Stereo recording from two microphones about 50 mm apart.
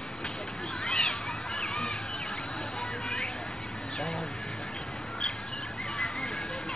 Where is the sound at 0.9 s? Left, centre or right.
Centre.